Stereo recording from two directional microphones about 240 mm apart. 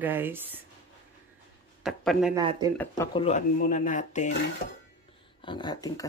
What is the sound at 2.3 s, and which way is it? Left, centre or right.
Speech, centre.